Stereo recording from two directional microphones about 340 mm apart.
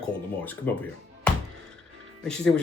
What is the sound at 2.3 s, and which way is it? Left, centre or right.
Speech, centre.